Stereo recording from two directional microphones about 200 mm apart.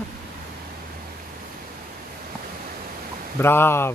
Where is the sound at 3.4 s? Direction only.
10° left (ahead or behind).